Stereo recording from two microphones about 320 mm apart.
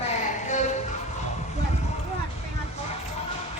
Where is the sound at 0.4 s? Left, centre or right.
Left.